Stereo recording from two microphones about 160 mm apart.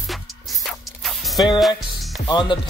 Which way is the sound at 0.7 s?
Centre (ahead or behind).